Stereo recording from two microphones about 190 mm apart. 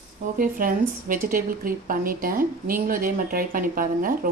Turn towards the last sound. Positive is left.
turn(degrees=-45)  # may be behind; listen again after turning